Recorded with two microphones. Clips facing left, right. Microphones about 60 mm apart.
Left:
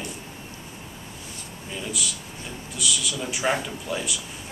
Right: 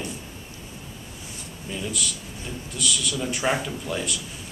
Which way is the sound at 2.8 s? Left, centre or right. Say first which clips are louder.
Right 1 dB; centre.